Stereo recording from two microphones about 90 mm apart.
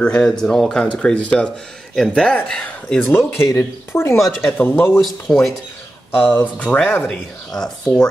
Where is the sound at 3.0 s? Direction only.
25° left (ahead or behind).